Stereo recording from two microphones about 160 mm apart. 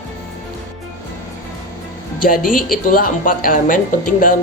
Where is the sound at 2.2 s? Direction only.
60° left (ahead or behind).